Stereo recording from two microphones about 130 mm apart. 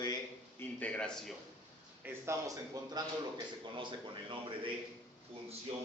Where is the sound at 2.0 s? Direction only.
20° right (ahead or behind).